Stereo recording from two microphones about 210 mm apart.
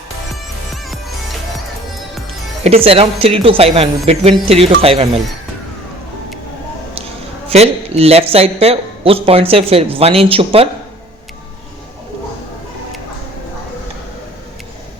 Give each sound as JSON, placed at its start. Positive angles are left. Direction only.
{"t": 2.6, "sound": "speech", "side_deg": -30}
{"t": 7.5, "sound": "speech", "side_deg": -30}